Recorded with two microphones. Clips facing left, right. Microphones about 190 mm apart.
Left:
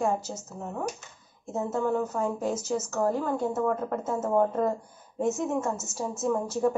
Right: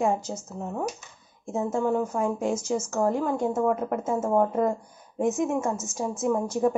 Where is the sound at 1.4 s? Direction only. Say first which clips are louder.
Right 2 dB; 10° right (ahead or behind).